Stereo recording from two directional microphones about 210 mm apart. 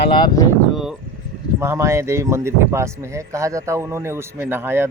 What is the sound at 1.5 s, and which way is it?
Speech, 15° right (ahead or behind).